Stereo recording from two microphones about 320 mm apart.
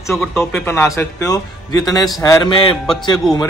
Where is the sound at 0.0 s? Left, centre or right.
Centre.